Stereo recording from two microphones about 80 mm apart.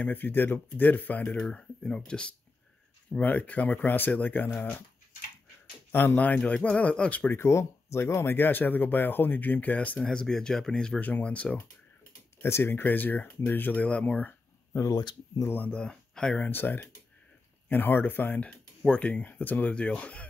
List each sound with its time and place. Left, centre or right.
0.0 s speech: left
1.3 s speech: centre
5.9 s speech: left
7.3 s speech: left
9.9 s speech: centre
11.0 s speech: centre
12.4 s speech: left
14.7 s speech: left
15.0 s speech: left
15.4 s speech: left
15.8 s speech: centre
16.4 s speech: left